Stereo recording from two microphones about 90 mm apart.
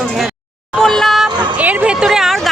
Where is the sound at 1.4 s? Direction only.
15° right (ahead or behind).